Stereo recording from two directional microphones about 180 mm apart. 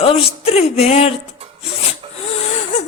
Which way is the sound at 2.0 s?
30° right (ahead or behind).